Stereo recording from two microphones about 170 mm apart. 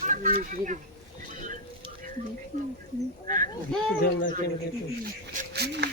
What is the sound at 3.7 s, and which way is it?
Speech, 5° left (ahead or behind).